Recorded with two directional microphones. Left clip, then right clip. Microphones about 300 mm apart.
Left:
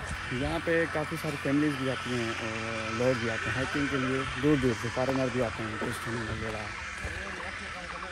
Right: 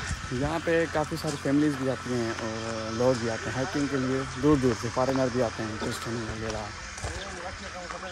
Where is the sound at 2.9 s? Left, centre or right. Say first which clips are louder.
Right 3 dB; centre.